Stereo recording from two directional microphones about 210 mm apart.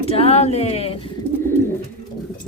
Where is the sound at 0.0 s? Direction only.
30° left (ahead or behind).